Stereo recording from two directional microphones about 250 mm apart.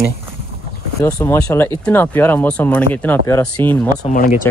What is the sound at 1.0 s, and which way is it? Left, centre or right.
Speech, centre.